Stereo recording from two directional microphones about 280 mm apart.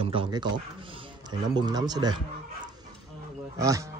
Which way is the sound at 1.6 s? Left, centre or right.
Centre.